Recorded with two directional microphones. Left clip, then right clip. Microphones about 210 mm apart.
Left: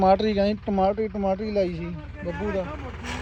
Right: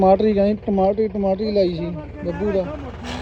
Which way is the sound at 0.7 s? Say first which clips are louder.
Right 4 dB; 55° left (ahead or behind).